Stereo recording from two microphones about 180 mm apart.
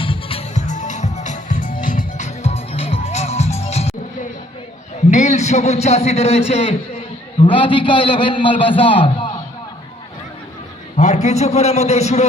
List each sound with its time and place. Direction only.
0.0 s music: 30° left (ahead or behind)
5.1 s a man's voice: 40° left (ahead or behind)
10.9 s a man's voice: 40° left (ahead or behind)